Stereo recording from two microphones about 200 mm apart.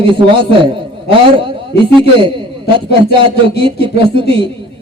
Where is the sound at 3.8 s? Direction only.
25° right (ahead or behind).